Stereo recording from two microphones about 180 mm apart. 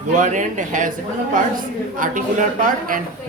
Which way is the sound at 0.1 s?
45° right (ahead or behind).